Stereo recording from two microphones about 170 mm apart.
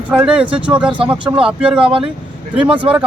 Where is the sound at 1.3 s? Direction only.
5° right (ahead or behind).